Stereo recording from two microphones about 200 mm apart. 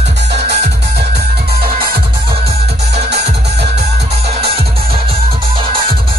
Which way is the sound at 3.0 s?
55° right (ahead or behind).